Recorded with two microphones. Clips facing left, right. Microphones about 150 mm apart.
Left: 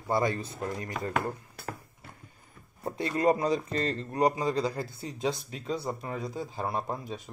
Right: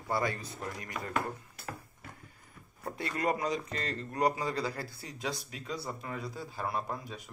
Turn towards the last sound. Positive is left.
turn(degrees=30)  # may be behind; listen again after turning